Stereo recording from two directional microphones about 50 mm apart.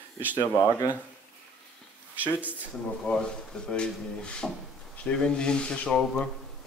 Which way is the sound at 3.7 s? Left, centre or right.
Centre.